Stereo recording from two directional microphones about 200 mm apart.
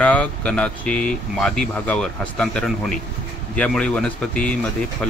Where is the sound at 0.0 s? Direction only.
5° left (ahead or behind).